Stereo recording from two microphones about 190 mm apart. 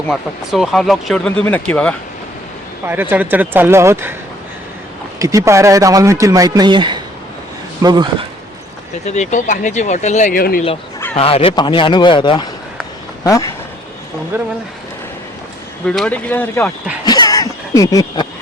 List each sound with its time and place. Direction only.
0.1 s speech: centre (ahead or behind)
2.8 s a man's voice: 10° right (ahead or behind)
5.2 s a man's voice: 15° right (ahead or behind)
9.0 s speech: 40° left (ahead or behind)
11.1 s speech: 30° left (ahead or behind)
14.3 s a man's voice: 10° right (ahead or behind)
15.9 s speech: 5° left (ahead or behind)
17.1 s cough: 20° left (ahead or behind)